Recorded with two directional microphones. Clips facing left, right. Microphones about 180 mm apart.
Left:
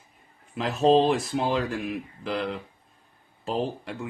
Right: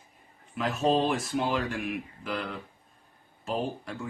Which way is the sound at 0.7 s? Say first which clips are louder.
Left 6 dB; 30° left (ahead or behind).